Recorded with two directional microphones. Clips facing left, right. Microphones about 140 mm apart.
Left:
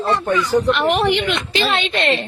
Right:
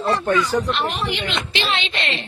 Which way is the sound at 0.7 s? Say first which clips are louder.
Left 7 dB; 65° left (ahead or behind).